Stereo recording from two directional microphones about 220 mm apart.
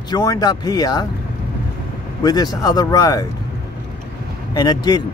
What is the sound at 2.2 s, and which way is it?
Speech, 15° left (ahead or behind).